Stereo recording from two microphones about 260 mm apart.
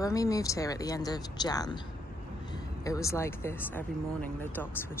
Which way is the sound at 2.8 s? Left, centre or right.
Centre.